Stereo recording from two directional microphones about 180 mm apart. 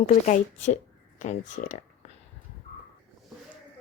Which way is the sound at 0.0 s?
45° left (ahead or behind).